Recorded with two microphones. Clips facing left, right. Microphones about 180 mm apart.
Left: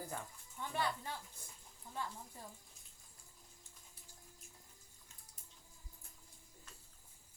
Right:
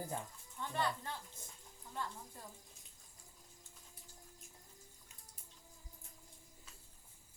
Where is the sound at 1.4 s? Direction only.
25° right (ahead or behind).